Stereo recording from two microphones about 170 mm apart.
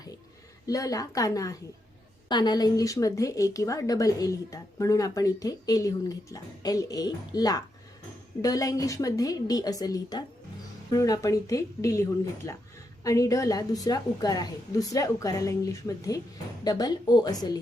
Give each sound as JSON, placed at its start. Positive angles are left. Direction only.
{"t": 0.7, "sound": "a woman's voice", "side_deg": 20}